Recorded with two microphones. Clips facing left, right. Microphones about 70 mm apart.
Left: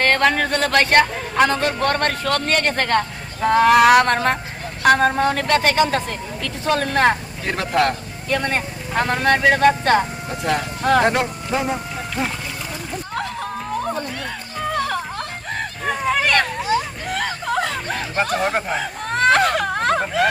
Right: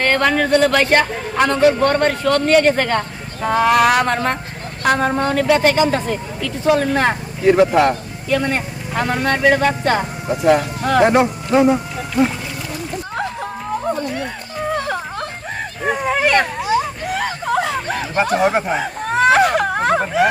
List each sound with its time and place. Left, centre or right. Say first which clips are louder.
0.0 s a man's voice: right 1 dB; centre
8.3 s a man's voice: right 3 dB; centre
13.1 s music: right 2 dB; right
15.8 s a sound: right 3 dB; centre